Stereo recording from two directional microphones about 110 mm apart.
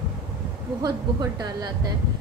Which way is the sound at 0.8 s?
35° right (ahead or behind).